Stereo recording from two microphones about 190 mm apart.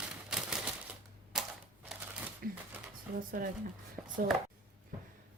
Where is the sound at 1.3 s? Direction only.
5° right (ahead or behind).